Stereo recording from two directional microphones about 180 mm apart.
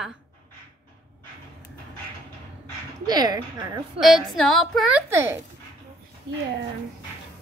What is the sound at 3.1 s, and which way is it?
Speech, 20° right (ahead or behind).